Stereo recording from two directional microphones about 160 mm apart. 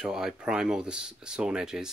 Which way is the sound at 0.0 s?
5° right (ahead or behind).